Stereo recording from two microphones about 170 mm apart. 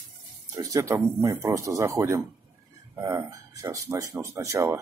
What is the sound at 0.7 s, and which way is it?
Speech, 15° right (ahead or behind).